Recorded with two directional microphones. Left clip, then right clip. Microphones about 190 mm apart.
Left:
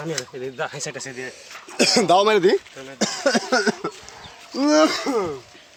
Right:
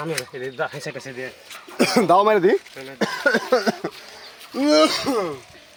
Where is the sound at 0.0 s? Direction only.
5° right (ahead or behind).